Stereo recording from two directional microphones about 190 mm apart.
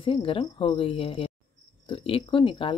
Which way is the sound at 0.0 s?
25° left (ahead or behind).